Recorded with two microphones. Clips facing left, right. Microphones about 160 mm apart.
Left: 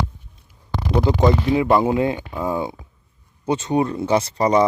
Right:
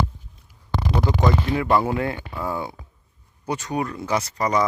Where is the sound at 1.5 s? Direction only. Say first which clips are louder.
Left 4 dB; 20° left (ahead or behind).